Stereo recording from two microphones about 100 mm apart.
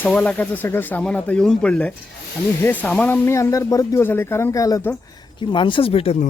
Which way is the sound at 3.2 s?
30° left (ahead or behind).